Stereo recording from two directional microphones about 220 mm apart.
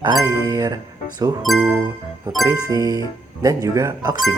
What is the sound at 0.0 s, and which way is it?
Speech, 15° right (ahead or behind).